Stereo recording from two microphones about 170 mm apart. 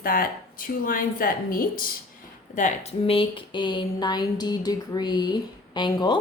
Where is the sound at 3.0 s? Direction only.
30° left (ahead or behind).